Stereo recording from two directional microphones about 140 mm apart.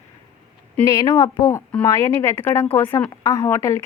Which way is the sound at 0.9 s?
20° left (ahead or behind).